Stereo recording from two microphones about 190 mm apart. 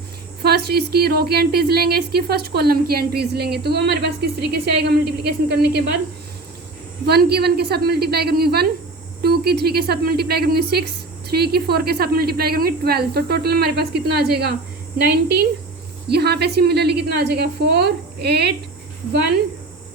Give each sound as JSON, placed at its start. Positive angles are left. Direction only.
{"t": 0.4, "sound": "speech", "side_deg": -55}
{"t": 7.0, "sound": "speech", "side_deg": -55}